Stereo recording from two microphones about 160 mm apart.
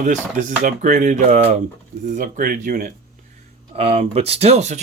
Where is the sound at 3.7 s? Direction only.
40° right (ahead or behind).